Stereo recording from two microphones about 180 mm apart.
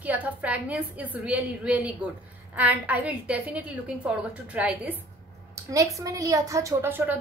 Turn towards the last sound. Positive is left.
turn(degrees=-10)  # may be behind; listen again after turning